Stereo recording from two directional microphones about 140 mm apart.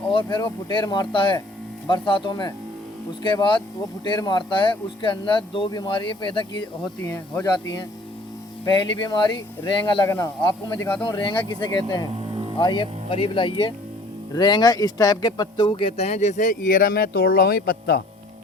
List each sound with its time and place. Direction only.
0.1 s speech: 35° left (ahead or behind)
8.6 s speech: 30° left (ahead or behind)
12.1 s music: 35° right (ahead or behind)
12.5 s speech: 35° left (ahead or behind); by 17.9 s 90° left